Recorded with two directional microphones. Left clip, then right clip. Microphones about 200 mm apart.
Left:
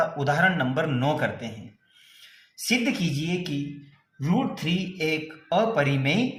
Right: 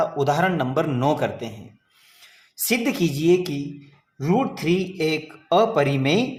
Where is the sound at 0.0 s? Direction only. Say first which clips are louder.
Right 2 dB; 30° right (ahead or behind).